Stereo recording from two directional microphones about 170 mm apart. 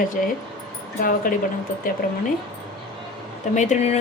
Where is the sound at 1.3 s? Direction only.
55° left (ahead or behind).